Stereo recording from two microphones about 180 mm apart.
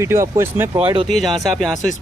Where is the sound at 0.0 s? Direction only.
15° right (ahead or behind).